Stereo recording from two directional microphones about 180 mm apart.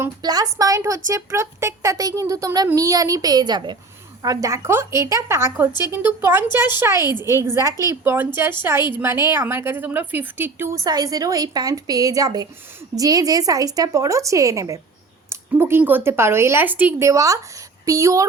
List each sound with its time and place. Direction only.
0.0 s a woman's voice: 20° right (ahead or behind)